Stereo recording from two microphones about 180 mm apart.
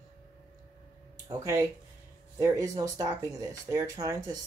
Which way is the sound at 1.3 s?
15° right (ahead or behind).